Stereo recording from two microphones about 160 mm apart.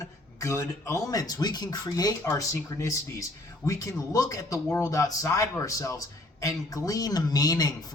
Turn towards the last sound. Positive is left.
turn(degrees=25)  # may be behind; listen again after turning